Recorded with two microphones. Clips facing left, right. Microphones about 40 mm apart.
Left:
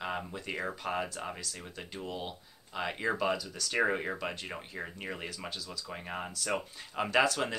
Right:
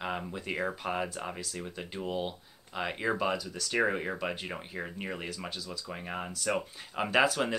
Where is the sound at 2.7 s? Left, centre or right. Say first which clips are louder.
Right 1 dB; centre.